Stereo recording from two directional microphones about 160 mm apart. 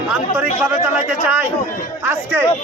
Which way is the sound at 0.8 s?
10° right (ahead or behind).